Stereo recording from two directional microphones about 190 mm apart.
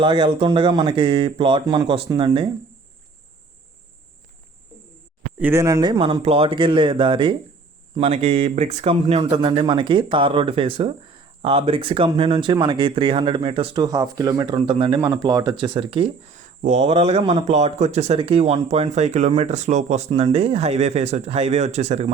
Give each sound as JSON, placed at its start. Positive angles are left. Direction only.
{"t": 0.0, "sound": "speech", "side_deg": -25}
{"t": 5.4, "sound": "speech", "side_deg": -15}